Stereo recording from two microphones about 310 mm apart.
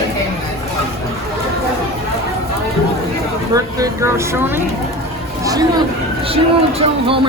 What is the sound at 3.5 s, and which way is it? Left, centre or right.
Speech, centre.